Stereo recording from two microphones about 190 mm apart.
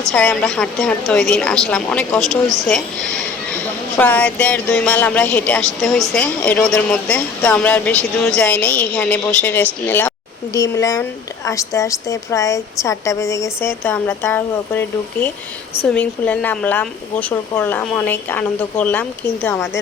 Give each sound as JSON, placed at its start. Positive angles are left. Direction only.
{"t": 0.1, "sound": "a woman's voice", "side_deg": 5}